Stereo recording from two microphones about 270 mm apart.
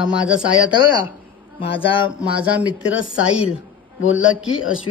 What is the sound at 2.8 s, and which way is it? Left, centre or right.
A man's voice, left.